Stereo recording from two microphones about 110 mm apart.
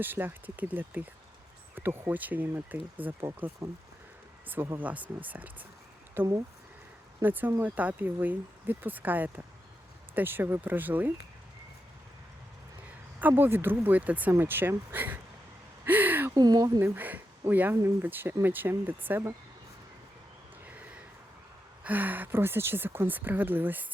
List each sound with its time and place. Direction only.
0.0 s speech: 20° right (ahead or behind)
4.4 s speech: 20° right (ahead or behind)
13.1 s speech: 15° right (ahead or behind)
15.8 s a sound: 15° right (ahead or behind)
16.3 s speech: 35° right (ahead or behind)
16.8 s speech: 15° right (ahead or behind)
20.7 s a sound: 15° right (ahead or behind)
21.8 s speech: 15° right (ahead or behind)